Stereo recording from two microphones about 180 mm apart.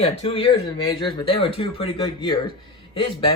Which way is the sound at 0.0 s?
30° left (ahead or behind).